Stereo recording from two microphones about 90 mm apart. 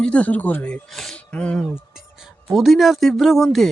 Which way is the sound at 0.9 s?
5° left (ahead or behind).